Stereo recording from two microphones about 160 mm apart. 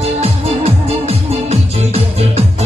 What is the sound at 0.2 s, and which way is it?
Music, 40° right (ahead or behind).